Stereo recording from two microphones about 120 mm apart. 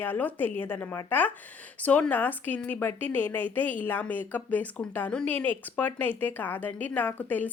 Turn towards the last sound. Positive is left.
turn(degrees=15)  # may be behind; listen again after turning